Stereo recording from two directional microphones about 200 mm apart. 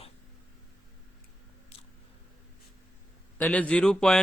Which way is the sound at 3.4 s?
5° left (ahead or behind).